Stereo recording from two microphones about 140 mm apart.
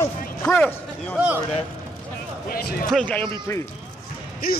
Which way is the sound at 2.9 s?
10° left (ahead or behind).